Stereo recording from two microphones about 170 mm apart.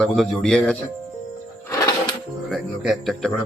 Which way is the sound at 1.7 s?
20° left (ahead or behind).